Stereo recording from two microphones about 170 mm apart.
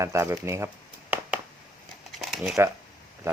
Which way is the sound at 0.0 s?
15° right (ahead or behind).